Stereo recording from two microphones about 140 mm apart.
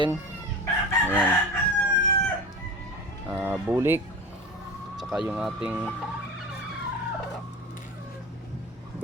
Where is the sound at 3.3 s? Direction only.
15° right (ahead or behind).